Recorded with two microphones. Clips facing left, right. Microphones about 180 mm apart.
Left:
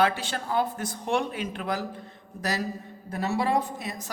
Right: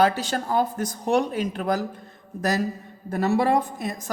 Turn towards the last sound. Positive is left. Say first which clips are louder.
# right 3 dB
turn(degrees=-50)  # may be behind; listen again after turning